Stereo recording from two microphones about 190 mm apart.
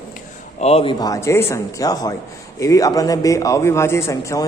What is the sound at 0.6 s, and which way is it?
A man's voice, 30° left (ahead or behind).